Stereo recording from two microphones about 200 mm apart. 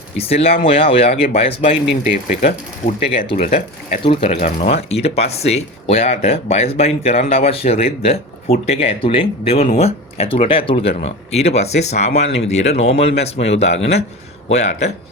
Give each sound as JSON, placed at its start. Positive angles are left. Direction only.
{"t": 0.2, "sound": "speech", "side_deg": 30}